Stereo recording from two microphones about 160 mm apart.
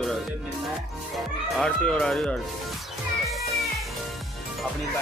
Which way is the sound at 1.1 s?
5° left (ahead or behind).